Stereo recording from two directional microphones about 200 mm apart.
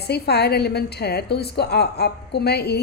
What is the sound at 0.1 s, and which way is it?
A woman's voice, 55° left (ahead or behind).